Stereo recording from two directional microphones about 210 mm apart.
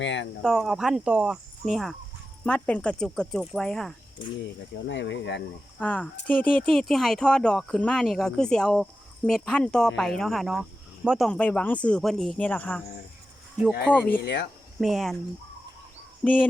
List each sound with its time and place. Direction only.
0.0 s speech: 60° left (ahead or behind)
0.4 s speech: centre (ahead or behind)
4.9 s speech: 60° left (ahead or behind)
5.8 s speech: 5° left (ahead or behind)
13.9 s speech: 10° left (ahead or behind)
14.2 s speech: 55° left (ahead or behind)
14.8 s speech: centre (ahead or behind)
16.2 s speech: 5° left (ahead or behind)